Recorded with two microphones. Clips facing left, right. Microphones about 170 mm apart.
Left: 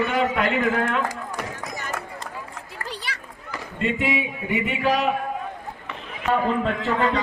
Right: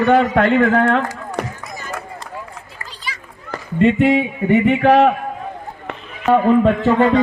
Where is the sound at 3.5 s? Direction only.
60° right (ahead or behind).